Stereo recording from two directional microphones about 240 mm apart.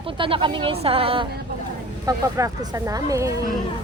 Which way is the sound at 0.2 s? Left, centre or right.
Right.